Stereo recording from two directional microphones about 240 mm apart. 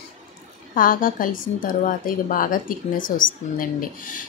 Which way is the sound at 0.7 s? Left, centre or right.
Left.